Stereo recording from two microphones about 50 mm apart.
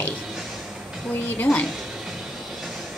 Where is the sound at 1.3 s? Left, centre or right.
Left.